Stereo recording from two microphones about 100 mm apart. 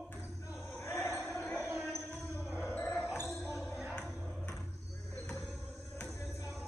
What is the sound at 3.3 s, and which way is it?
Basketball bounce, centre (ahead or behind).